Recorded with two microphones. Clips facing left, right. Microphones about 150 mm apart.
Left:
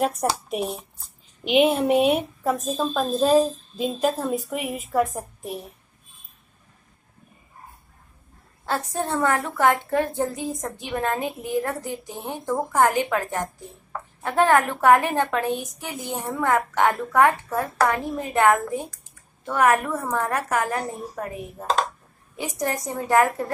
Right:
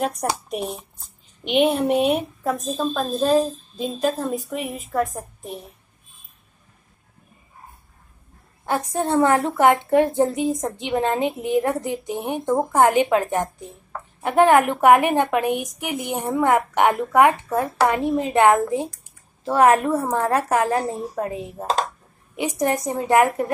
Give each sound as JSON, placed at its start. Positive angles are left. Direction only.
{"t": 0.0, "sound": "speech", "side_deg": 0}
{"t": 8.6, "sound": "a woman's voice", "side_deg": -15}